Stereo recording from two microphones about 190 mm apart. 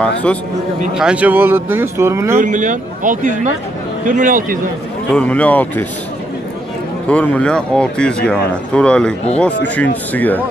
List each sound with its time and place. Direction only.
0.0 s speech: 5° left (ahead or behind)
0.9 s speech: 5° right (ahead or behind)
2.3 s speech: 45° right (ahead or behind)
5.1 s speech: 5° left (ahead or behind)
7.1 s speech: 5° left (ahead or behind)